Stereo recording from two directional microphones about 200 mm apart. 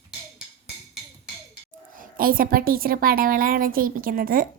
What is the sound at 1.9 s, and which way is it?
A woman's voice, 45° right (ahead or behind).